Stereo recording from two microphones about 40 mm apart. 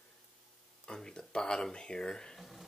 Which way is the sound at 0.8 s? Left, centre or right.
Centre.